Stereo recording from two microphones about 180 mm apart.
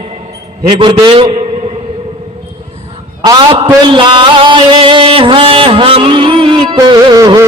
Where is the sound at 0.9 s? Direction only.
25° right (ahead or behind).